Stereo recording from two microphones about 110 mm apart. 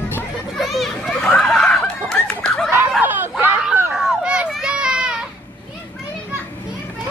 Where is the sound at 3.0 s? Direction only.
15° right (ahead or behind).